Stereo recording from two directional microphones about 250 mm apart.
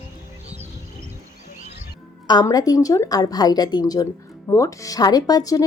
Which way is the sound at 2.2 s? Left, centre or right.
Centre.